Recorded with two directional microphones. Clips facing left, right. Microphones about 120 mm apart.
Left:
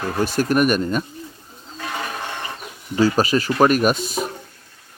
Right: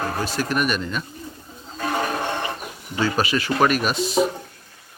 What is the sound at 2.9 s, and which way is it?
Speech, 40° left (ahead or behind).